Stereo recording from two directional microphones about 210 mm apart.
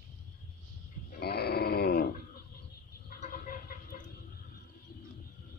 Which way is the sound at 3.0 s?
40° left (ahead or behind).